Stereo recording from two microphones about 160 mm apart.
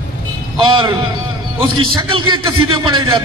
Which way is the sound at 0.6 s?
30° right (ahead or behind).